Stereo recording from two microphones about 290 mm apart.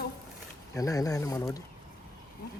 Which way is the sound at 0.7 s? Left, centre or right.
Centre.